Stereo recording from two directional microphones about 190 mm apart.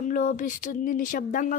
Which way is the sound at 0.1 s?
45° left (ahead or behind).